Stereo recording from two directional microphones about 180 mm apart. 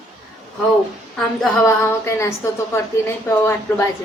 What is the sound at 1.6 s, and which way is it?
Speech, 15° left (ahead or behind).